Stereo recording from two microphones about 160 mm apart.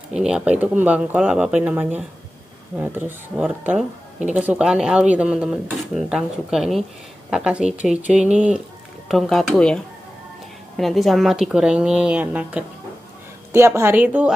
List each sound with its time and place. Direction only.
0.1 s a woman's voice: 5° right (ahead or behind)
10.8 s a woman's voice: centre (ahead or behind)